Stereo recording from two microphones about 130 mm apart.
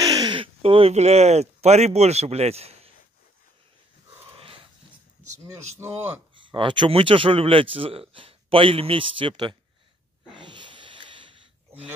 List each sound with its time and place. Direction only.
0.0 s speech: 30° right (ahead or behind); by 2.9 s 50° right (ahead or behind)
4.4 s dog: 45° right (ahead or behind)
5.8 s speech: 20° right (ahead or behind)
6.3 s speech: 40° right (ahead or behind)
10.3 s a sound: 40° right (ahead or behind)